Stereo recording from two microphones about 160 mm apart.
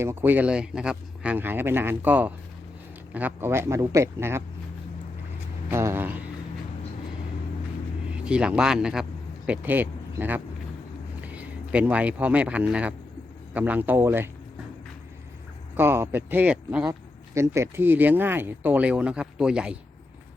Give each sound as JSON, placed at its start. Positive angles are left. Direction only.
{"t": 0.0, "sound": "speech", "side_deg": -15}
{"t": 5.7, "sound": "speech", "side_deg": -15}
{"t": 8.1, "sound": "speech", "side_deg": -5}
{"t": 15.7, "sound": "speech", "side_deg": -15}
{"t": 17.3, "sound": "speech", "side_deg": -15}